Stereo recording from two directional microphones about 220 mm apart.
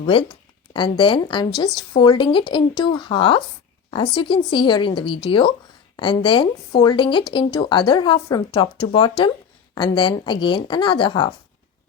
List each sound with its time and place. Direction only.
0.0 s speech: 25° left (ahead or behind)